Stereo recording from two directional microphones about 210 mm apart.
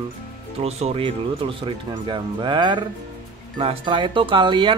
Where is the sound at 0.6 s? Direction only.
30° right (ahead or behind).